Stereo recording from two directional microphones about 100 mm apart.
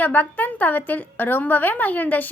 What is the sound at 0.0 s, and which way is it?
A woman's voice, 15° left (ahead or behind).